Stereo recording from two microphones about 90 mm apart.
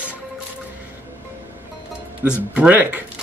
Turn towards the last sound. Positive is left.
turn(degrees=-15)  # may be behind; listen again after turning